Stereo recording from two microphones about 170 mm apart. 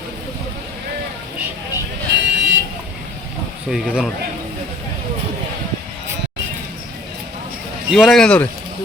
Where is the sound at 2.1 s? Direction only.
90° right.